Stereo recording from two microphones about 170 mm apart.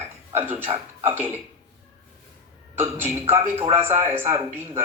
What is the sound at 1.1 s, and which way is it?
Speech, 10° right (ahead or behind).